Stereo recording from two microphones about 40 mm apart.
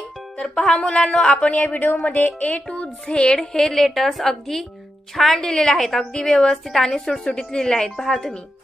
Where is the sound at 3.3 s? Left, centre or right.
Centre.